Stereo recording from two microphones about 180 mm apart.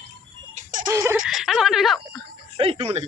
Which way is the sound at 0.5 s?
45° right (ahead or behind).